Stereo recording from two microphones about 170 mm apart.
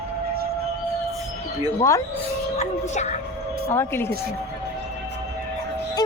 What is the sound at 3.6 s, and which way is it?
Speech, 15° left (ahead or behind).